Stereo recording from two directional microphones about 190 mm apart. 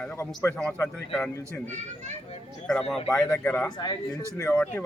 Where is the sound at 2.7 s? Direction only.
Centre (ahead or behind).